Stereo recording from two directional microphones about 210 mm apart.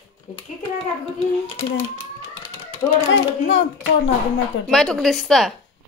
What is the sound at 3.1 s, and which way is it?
Speech, 60° left (ahead or behind).